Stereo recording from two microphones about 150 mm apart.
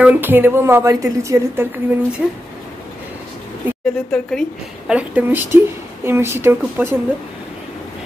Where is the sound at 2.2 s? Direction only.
5° right (ahead or behind).